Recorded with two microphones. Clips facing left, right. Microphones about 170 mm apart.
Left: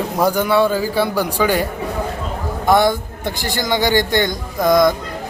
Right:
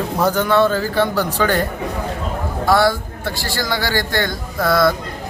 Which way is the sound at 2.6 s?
20° left (ahead or behind).